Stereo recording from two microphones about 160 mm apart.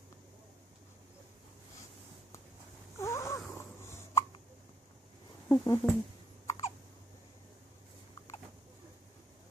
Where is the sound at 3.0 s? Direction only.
20° left (ahead or behind).